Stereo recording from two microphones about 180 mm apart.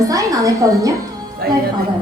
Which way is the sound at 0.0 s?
20° right (ahead or behind).